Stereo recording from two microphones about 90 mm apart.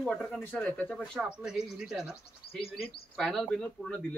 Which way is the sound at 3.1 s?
10° left (ahead or behind).